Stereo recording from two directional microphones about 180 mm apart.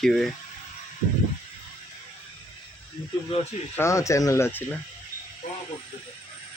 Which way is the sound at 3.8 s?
15° left (ahead or behind).